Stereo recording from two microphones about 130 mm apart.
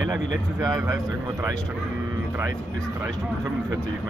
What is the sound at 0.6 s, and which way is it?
Speech, 30° right (ahead or behind).